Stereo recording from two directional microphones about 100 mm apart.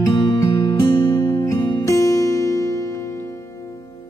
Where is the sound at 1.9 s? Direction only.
35° left (ahead or behind).